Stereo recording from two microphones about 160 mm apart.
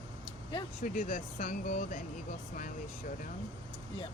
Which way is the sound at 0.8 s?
55° left (ahead or behind).